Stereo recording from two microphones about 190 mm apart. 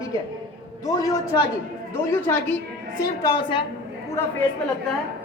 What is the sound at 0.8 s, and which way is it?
A woman's voice, 20° left (ahead or behind).